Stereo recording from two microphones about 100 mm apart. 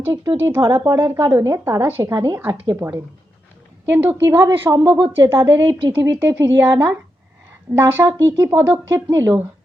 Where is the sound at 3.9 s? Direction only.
15° right (ahead or behind).